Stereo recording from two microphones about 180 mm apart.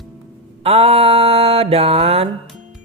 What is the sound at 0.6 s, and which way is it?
Mantra, 35° right (ahead or behind).